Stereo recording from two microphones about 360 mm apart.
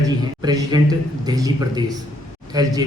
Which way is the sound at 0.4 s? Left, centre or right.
Centre.